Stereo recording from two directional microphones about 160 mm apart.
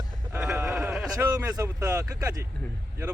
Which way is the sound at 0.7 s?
5° right (ahead or behind).